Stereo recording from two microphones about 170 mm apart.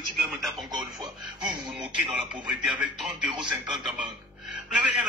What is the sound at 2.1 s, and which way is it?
Speech, 5° right (ahead or behind).